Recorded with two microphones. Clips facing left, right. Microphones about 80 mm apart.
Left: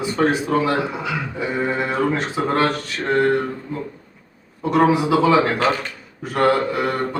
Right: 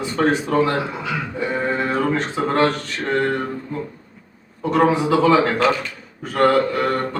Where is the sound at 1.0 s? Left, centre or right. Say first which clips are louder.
Even; centre.